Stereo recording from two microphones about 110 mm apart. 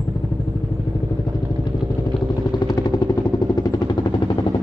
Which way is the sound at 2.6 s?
40° left (ahead or behind).